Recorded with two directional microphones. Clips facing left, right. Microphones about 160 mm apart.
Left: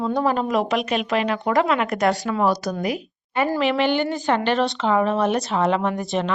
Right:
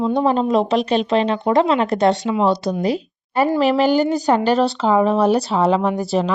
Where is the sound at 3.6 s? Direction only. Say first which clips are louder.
Right 5 dB; 40° right (ahead or behind).